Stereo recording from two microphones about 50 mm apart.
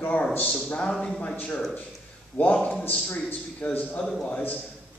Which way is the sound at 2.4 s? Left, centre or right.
Left.